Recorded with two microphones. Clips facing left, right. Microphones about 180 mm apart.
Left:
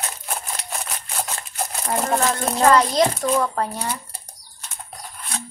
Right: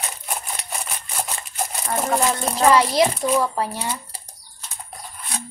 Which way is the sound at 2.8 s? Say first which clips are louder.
Even; 20° right (ahead or behind).